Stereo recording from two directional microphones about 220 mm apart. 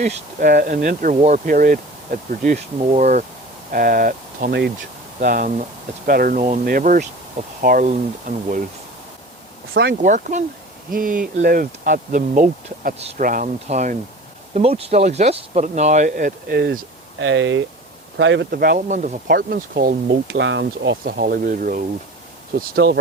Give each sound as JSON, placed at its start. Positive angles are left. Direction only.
{"t": 0.0, "sound": "speech", "side_deg": -35}
{"t": 10.0, "sound": "speech", "side_deg": -35}